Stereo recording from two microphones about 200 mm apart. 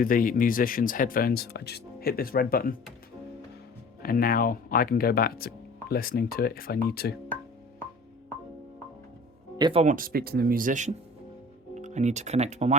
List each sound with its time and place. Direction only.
0.0 s speech: 45° left (ahead or behind)
4.0 s speech: 45° left (ahead or behind)
9.6 s speech: 20° right (ahead or behind)
9.8 s speech: 45° right (ahead or behind)